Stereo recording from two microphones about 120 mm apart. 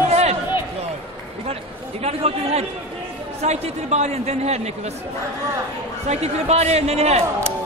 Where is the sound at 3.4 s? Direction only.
65° right (ahead or behind).